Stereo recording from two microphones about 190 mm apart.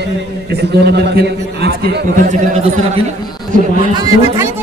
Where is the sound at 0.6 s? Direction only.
60° right (ahead or behind).